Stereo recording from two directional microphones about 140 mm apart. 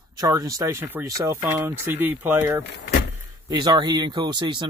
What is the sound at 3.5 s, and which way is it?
Speech, 30° right (ahead or behind).